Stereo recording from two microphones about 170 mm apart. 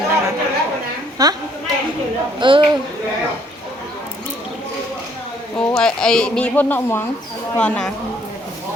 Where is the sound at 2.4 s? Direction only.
30° right (ahead or behind).